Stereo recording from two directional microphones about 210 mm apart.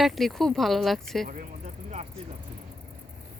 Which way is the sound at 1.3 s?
40° right (ahead or behind).